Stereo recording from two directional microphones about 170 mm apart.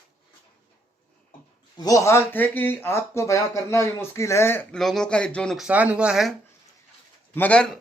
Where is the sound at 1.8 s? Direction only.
20° left (ahead or behind); by 6.3 s 5° right (ahead or behind).